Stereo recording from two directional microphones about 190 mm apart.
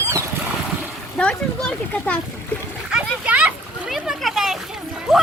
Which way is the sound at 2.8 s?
5° right (ahead or behind).